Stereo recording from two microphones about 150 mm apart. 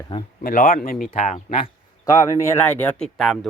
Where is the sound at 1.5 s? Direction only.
40° left (ahead or behind).